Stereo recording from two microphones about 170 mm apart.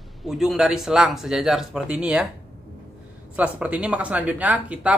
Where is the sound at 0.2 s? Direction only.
Centre (ahead or behind).